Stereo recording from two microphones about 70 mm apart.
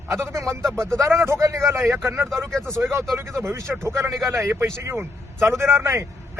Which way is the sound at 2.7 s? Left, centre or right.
Right.